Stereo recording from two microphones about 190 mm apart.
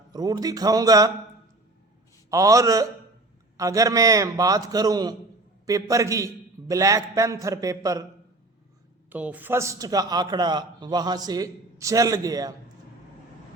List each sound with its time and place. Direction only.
0.1 s a man's voice: 20° right (ahead or behind)
2.3 s a man's voice: 15° right (ahead or behind)
9.0 s a man's voice: 10° right (ahead or behind)